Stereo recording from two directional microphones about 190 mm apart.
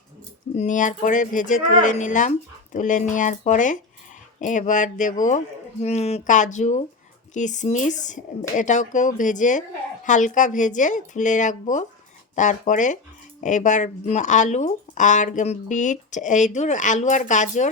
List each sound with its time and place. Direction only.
0.5 s speech: 40° left (ahead or behind)